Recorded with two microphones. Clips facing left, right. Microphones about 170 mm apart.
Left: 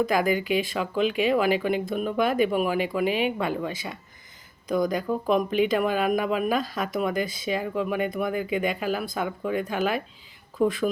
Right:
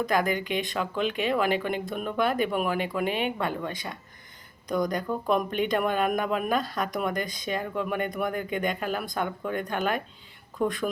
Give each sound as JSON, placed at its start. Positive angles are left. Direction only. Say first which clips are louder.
{"t": 0.0, "sound": "speech", "louder": "left 3 dB", "side_deg": 10}